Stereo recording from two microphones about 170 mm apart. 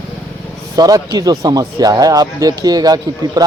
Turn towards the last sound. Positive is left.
turn(degrees=-20)  # may be behind; listen again after turning